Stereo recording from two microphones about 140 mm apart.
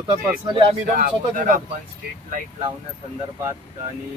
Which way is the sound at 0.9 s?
80° right.